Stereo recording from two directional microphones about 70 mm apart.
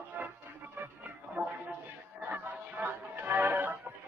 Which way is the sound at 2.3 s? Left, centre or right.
Right.